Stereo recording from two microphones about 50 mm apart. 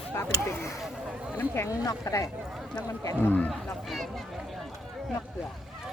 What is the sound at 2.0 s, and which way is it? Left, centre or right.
Speech, left.